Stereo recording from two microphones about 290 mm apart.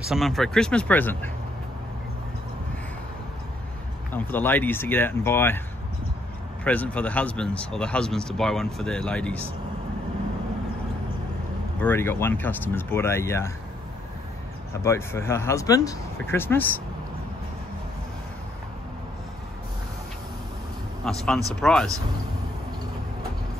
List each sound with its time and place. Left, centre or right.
0.1 s speech: centre
4.1 s speech: centre
6.6 s speech: centre
11.8 s speech: centre
14.8 s speech: centre
21.0 s speech: centre